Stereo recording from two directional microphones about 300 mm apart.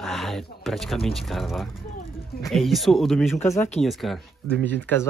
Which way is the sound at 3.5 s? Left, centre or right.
Left.